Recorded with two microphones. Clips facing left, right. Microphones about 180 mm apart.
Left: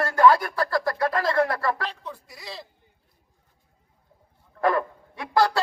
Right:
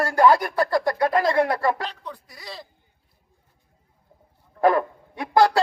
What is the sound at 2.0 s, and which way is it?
Speech, centre (ahead or behind).